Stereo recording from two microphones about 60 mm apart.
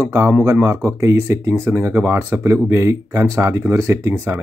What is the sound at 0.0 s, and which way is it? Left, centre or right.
Speech, right.